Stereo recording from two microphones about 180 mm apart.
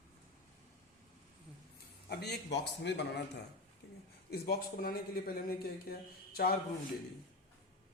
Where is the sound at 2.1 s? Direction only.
65° left (ahead or behind).